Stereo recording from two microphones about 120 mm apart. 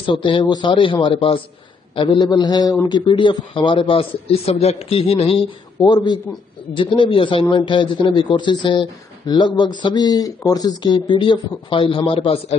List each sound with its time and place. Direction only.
0.0 s a man's voice: 45° left (ahead or behind)
5.8 s a man's voice: 35° left (ahead or behind); by 12.5 s 50° left (ahead or behind)